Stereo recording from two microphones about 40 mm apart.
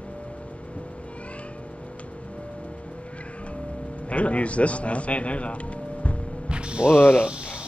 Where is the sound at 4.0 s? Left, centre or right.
Left.